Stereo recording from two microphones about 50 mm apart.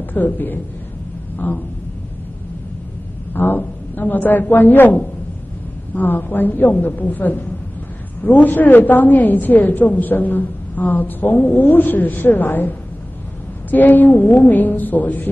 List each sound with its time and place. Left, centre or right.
0.1 s a woman's voice: left
3.3 s a man's voice: left